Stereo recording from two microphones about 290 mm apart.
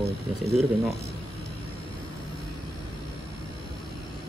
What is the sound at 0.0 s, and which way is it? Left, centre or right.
Speech, right.